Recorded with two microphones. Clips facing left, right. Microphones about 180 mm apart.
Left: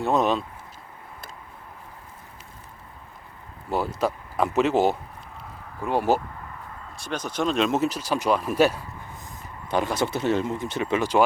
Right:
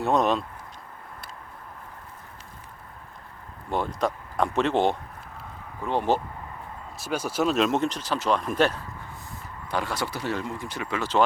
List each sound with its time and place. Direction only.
0.0 s speech: centre (ahead or behind)
3.7 s speech: 5° left (ahead or behind)
6.9 s speech: 5° right (ahead or behind)
9.6 s speech: 20° left (ahead or behind)